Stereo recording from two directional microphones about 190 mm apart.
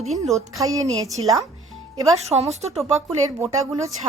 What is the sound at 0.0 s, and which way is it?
Speech, 35° right (ahead or behind).